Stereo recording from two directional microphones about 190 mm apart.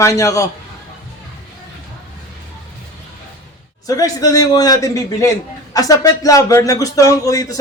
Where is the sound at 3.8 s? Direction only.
20° left (ahead or behind).